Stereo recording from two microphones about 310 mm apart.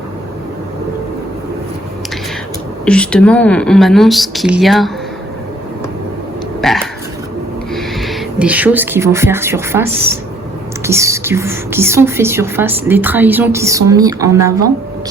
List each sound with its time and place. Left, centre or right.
2.8 s speech: centre
6.6 s a sound: centre
7.7 s speech: centre